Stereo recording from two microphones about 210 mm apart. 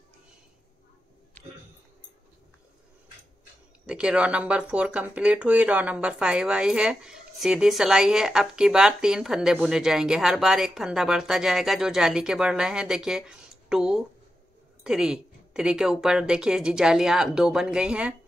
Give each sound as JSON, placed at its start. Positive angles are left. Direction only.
{"t": 3.8, "sound": "speech", "side_deg": -5}